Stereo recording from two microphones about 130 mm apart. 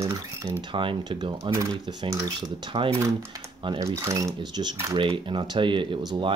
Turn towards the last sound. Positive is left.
turn(degrees=-40)  # may be behind; listen again after turning